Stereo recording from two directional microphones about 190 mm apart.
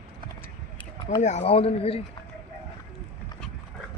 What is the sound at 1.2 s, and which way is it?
Speech, 35° left (ahead or behind).